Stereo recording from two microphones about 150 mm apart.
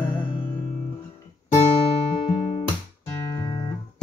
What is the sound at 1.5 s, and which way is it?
Guitar, 45° left (ahead or behind).